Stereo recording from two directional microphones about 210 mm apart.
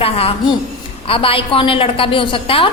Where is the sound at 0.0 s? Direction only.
25° left (ahead or behind).